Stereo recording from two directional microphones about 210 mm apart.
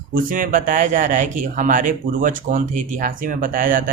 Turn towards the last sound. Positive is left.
turn(degrees=-40)  # may be behind; listen again after turning